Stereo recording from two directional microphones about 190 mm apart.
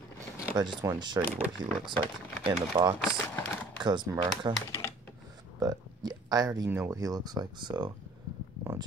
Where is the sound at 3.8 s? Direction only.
25° right (ahead or behind).